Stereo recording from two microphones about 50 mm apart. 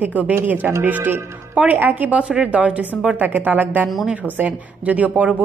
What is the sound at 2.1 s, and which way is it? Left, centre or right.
Speech, right.